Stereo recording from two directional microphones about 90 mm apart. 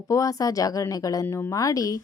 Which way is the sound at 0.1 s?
40° left (ahead or behind).